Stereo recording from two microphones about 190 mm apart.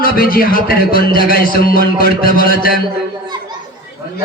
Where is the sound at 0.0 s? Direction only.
50° left (ahead or behind).